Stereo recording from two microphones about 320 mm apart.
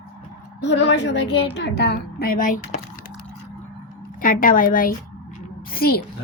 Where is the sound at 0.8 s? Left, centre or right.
Left.